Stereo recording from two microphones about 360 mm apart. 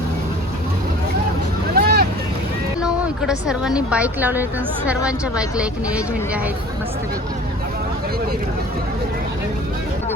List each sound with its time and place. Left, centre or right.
1.7 s boat: right
2.8 s speech: centre